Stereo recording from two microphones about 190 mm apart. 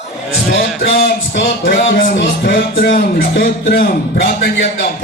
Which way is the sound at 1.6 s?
75° left (ahead or behind).